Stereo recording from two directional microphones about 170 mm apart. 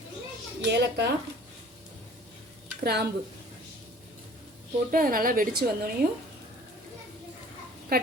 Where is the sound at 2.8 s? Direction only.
70° right (ahead or behind).